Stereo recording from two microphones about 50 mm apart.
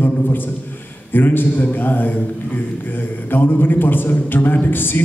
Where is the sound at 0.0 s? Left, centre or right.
Left.